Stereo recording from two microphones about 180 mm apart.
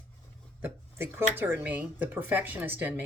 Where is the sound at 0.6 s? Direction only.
10° right (ahead or behind).